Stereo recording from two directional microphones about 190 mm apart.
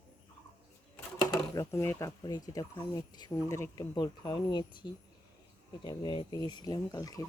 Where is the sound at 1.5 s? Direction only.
15° left (ahead or behind).